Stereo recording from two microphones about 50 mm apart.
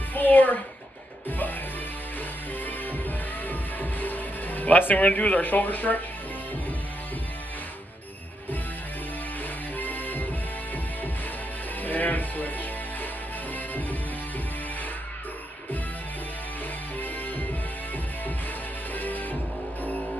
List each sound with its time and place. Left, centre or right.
0.1 s a sound: left
3.4 s music: left
9.8 s music: left
11.8 s music: left
17.0 s music: left
18.9 s music: left